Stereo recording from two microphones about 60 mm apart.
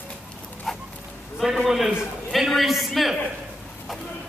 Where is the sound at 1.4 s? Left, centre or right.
Centre.